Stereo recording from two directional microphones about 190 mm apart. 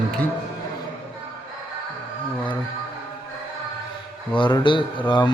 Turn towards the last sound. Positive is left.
turn(degrees=25)  # may be behind; listen again after turning